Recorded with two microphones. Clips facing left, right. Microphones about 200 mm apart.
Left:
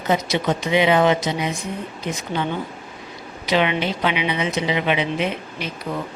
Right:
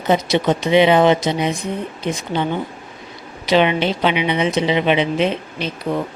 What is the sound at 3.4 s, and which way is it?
A woman's voice, 30° right (ahead or behind).